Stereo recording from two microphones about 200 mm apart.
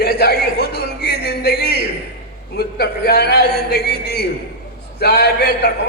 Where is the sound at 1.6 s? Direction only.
50° right (ahead or behind).